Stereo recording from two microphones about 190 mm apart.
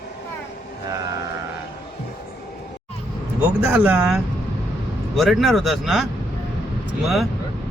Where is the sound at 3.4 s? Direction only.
10° right (ahead or behind).